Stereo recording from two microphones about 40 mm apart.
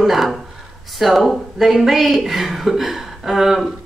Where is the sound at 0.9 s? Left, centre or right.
Centre.